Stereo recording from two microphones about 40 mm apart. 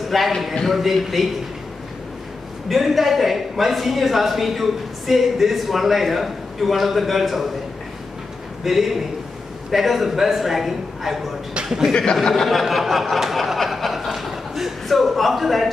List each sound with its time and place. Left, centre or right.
0.1 s speech: centre
2.7 s speech: centre
8.6 s speech: centre
11.9 s a man's voice: left
12.2 s speech: centre
12.6 s a sound: centre